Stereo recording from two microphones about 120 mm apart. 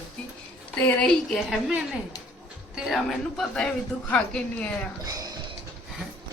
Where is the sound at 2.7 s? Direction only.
Centre (ahead or behind).